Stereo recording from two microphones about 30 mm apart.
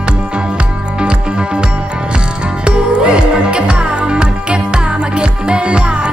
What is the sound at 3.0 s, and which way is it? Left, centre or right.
Music, right.